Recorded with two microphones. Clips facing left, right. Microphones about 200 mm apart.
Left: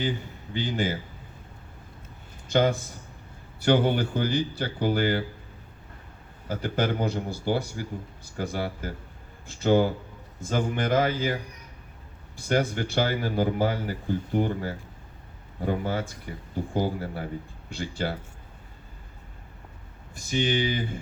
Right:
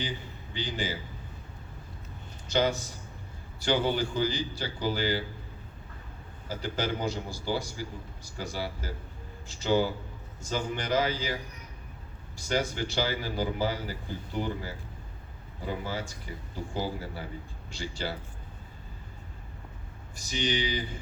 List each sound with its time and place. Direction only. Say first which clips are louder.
0.5 s speech: left 6 dB; 50° left (ahead or behind)
2.5 s a man's voice: left 4 dB; 50° left (ahead or behind)
6.5 s a man's voice: left 5 dB; 55° left (ahead or behind)
12.4 s a man's voice: left 4 dB; 55° left (ahead or behind)
20.1 s speech: left 5 dB; 50° left (ahead or behind)